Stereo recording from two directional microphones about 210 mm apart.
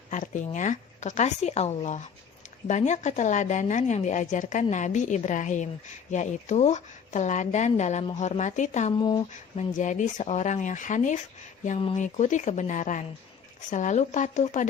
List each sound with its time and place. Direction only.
0.1 s speech: 35° left (ahead or behind)
9.0 s speech: 20° left (ahead or behind)
9.7 s speech: 35° left (ahead or behind)
11.8 s speech: 25° left (ahead or behind)